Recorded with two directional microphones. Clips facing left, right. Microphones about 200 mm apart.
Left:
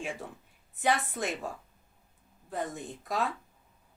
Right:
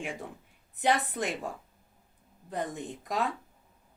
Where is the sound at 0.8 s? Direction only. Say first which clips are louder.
Right 1 dB; 15° right (ahead or behind).